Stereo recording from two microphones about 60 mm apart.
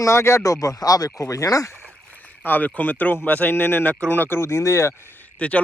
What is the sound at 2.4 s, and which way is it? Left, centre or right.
A man's voice, left.